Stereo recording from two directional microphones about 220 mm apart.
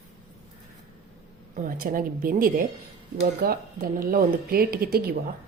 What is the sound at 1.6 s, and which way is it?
A woman's voice, 40° right (ahead or behind).